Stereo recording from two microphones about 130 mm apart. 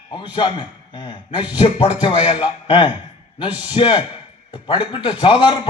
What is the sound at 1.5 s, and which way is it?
A man's voice, 40° left (ahead or behind).